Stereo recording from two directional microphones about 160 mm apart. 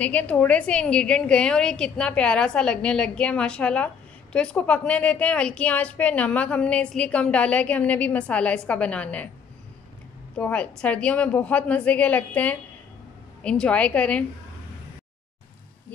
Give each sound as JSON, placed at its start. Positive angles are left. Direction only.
{"t": 0.0, "sound": "a woman's voice", "side_deg": 10}
{"t": 10.3, "sound": "a woman's voice", "side_deg": 10}